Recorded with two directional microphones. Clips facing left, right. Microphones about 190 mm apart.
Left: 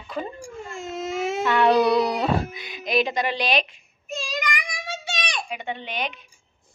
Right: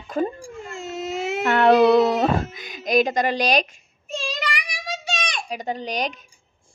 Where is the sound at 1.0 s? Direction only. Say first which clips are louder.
Left 1 dB; 25° right (ahead or behind).